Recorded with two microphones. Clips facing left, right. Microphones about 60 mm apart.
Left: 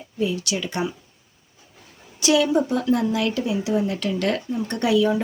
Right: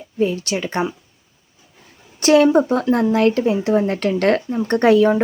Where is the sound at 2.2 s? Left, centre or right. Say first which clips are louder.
Right 6 dB; right.